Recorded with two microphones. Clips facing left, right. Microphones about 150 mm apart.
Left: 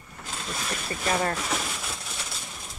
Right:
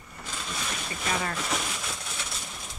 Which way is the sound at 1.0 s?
40° left (ahead or behind).